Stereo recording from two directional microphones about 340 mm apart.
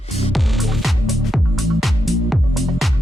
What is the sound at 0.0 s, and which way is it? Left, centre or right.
Music, centre.